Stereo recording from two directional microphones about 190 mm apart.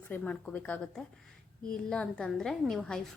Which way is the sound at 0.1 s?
5° left (ahead or behind).